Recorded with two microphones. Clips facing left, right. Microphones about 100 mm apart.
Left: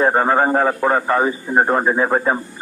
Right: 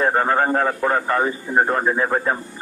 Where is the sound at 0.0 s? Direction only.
15° left (ahead or behind).